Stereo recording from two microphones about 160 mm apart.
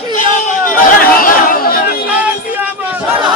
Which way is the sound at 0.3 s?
60° left (ahead or behind).